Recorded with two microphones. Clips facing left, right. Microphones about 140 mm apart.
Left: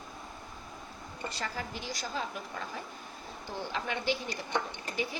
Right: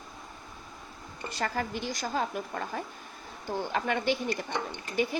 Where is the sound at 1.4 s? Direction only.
55° right (ahead or behind).